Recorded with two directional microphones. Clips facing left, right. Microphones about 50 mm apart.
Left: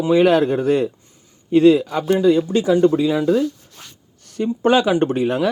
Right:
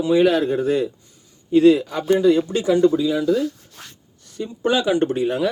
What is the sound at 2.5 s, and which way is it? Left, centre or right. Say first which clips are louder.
Speech: left 2 dB; left.